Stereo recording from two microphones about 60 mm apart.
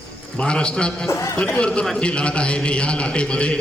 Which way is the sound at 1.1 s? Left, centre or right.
Left.